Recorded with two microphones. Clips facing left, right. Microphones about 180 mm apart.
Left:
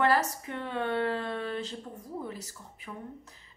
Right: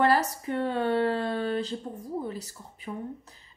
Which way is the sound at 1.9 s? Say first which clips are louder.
Right 5 dB; 30° right (ahead or behind).